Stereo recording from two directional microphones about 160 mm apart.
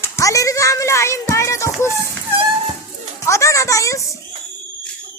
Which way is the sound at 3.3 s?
20° left (ahead or behind).